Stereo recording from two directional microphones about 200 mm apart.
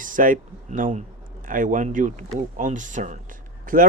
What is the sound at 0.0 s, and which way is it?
Speech, 40° right (ahead or behind).